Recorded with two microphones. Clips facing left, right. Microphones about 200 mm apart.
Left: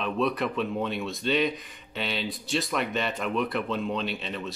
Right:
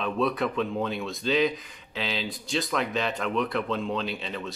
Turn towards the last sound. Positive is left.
turn(degrees=0)  # may be behind; listen again after turning